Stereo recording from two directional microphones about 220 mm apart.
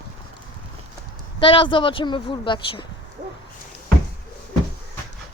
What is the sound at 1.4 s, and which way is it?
A woman's voice, 25° left (ahead or behind).